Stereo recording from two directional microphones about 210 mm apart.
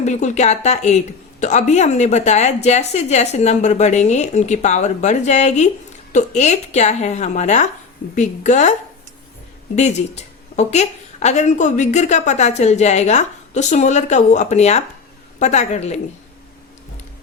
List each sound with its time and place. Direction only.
0.0 s speech: 35° left (ahead or behind)
9.7 s speech: 35° left (ahead or behind)